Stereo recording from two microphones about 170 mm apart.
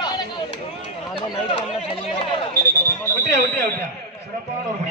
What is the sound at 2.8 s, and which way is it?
Speech, 15° left (ahead or behind).